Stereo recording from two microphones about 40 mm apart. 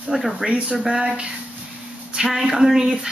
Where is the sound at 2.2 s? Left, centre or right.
Centre.